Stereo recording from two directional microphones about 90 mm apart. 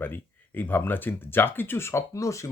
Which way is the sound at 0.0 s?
20° left (ahead or behind).